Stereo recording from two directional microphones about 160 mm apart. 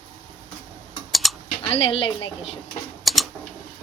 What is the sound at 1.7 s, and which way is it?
Speech, 35° left (ahead or behind).